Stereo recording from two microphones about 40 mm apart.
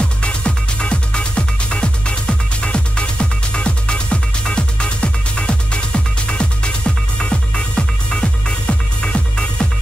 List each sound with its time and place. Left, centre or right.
0.2 s music: left